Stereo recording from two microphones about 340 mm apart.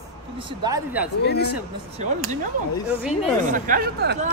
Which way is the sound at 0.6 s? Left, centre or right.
Centre.